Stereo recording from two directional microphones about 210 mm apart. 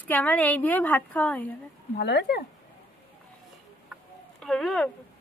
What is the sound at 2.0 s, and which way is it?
Speech, 50° left (ahead or behind).